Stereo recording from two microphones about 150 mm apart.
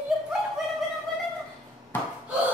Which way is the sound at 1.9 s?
15° left (ahead or behind).